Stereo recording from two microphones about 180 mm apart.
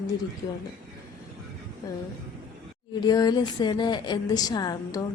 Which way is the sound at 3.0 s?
20° left (ahead or behind).